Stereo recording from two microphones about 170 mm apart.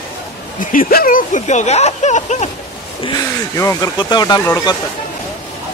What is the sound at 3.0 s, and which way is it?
Speech, 20° left (ahead or behind).